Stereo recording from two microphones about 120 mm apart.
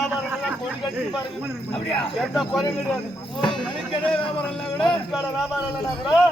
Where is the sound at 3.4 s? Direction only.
40° left (ahead or behind).